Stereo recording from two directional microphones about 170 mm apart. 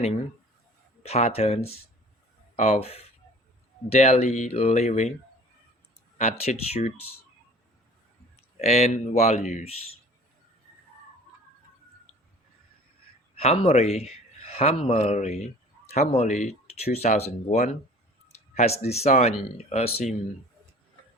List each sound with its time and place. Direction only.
1.0 s speech: 35° left (ahead or behind)
6.1 s speech: 40° left (ahead or behind)
8.6 s speech: 40° left (ahead or behind)
13.3 s a man's voice: 35° left (ahead or behind)